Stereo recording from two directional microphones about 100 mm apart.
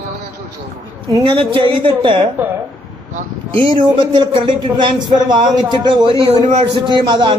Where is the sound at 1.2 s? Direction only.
60° right (ahead or behind).